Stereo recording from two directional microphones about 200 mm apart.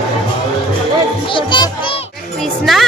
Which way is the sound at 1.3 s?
25° left (ahead or behind).